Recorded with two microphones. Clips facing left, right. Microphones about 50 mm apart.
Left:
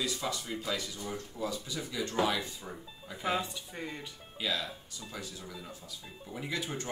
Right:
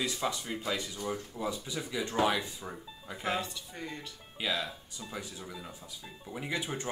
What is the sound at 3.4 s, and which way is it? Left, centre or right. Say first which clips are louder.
Speech: left 1 dB; centre.